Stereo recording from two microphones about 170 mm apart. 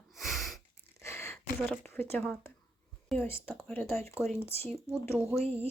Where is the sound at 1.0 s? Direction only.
15° left (ahead or behind).